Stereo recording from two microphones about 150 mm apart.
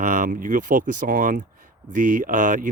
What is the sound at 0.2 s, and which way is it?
Speech, 65° right (ahead or behind).